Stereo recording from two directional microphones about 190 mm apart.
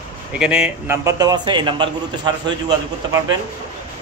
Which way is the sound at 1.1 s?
20° right (ahead or behind).